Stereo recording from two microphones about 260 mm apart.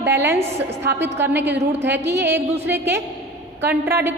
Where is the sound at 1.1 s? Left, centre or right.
Centre.